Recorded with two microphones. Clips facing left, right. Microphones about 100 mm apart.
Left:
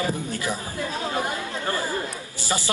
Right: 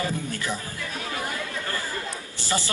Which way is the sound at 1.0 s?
25° left (ahead or behind).